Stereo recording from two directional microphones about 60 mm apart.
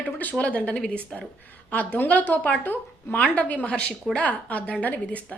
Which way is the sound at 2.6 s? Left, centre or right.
Left.